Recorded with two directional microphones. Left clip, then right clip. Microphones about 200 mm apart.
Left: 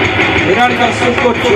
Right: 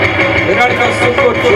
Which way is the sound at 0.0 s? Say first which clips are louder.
Even; 35° right (ahead or behind).